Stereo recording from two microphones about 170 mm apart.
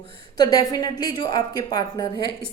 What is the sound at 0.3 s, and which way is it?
A woman's voice, 20° left (ahead or behind).